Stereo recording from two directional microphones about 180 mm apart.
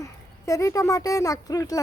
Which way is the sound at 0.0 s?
15° left (ahead or behind).